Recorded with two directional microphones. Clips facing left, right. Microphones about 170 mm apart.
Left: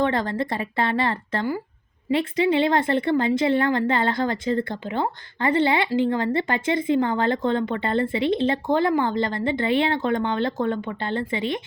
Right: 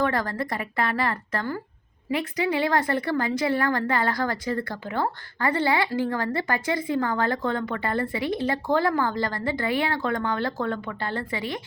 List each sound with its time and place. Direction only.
0.0 s speech: 25° left (ahead or behind)